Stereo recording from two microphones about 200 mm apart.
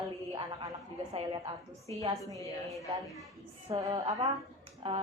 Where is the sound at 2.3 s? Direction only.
15° left (ahead or behind).